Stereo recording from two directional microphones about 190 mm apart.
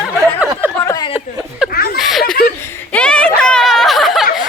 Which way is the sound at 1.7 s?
55° left (ahead or behind).